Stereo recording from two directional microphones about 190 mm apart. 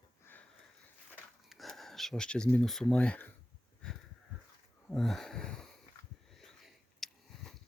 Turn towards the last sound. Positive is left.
turn(degrees=0)  # may be behind; listen again after turning